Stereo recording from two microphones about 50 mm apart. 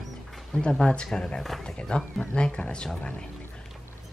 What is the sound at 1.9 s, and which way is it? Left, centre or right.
Speech, centre.